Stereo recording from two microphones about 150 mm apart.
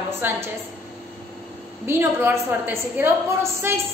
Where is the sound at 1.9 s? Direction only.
15° right (ahead or behind).